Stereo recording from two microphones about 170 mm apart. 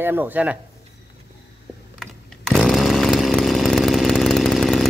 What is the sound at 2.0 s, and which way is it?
Chainsaw, centre (ahead or behind).